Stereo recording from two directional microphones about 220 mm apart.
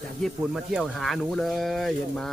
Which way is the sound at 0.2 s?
Centre (ahead or behind).